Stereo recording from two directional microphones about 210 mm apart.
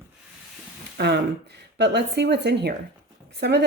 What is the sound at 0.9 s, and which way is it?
A woman's voice, 55° right (ahead or behind).